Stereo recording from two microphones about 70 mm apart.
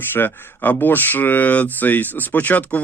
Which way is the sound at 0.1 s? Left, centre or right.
Left.